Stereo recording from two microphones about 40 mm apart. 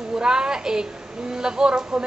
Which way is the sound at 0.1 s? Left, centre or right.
Centre.